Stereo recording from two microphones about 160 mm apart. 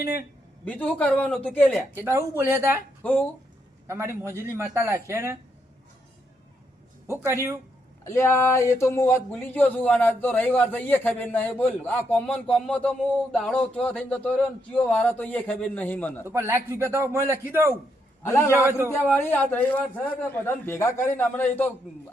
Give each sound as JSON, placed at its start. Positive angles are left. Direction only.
{"t": 0.6, "sound": "speech", "side_deg": 10}
{"t": 2.0, "sound": "a man's voice", "side_deg": -15}
{"t": 3.0, "sound": "speech", "side_deg": 10}
{"t": 3.8, "sound": "a man's voice", "side_deg": -15}
{"t": 7.1, "sound": "a man's voice", "side_deg": -15}
{"t": 8.0, "sound": "speech", "side_deg": 15}
{"t": 16.2, "sound": "a man's voice", "side_deg": -15}
{"t": 18.2, "sound": "a man's voice", "side_deg": 15}